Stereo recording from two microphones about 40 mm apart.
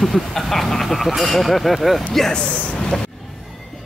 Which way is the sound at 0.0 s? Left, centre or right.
Centre.